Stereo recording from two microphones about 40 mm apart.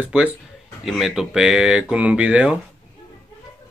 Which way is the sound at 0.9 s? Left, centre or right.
Centre.